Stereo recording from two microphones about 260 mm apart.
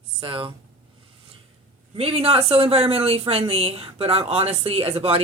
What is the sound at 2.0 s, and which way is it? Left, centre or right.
A woman's voice, right.